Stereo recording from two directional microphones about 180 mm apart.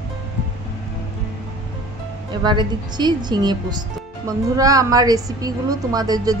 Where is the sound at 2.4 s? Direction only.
25° right (ahead or behind).